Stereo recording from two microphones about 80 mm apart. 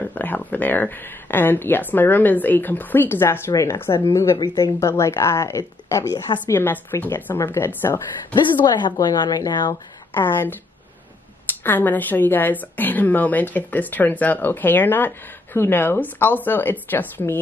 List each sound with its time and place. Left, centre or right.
0.0 s a woman's voice: left
6.5 s a woman's voice: left
8.6 s a woman's voice: left
10.1 s a woman's voice: left